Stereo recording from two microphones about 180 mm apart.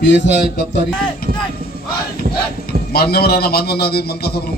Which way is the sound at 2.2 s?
55° right (ahead or behind).